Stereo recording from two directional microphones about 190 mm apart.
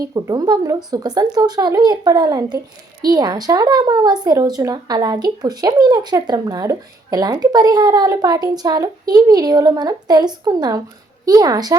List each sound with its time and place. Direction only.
0.0 s speech: 20° right (ahead or behind)